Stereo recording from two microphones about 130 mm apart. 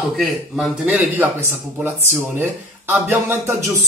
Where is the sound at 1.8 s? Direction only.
20° right (ahead or behind).